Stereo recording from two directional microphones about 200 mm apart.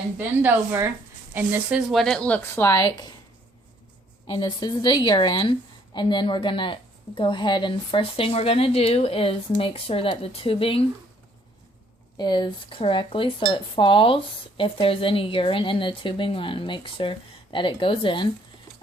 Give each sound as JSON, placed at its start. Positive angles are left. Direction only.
{"t": 0.2, "sound": "a woman's voice", "side_deg": -10}
{"t": 4.4, "sound": "a woman's voice", "side_deg": 20}
{"t": 12.1, "sound": "a woman's voice", "side_deg": 20}